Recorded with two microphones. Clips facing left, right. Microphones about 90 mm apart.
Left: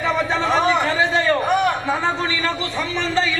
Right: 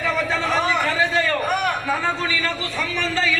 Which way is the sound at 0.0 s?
20° left (ahead or behind).